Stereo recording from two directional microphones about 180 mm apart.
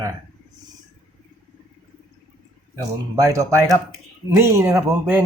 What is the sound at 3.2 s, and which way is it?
Speech, 20° right (ahead or behind).